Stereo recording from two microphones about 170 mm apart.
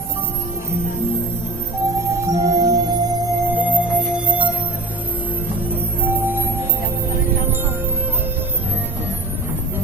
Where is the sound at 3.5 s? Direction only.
10° right (ahead or behind).